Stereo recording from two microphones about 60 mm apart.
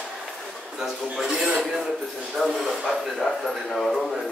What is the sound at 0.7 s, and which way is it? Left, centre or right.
A man's voice, centre.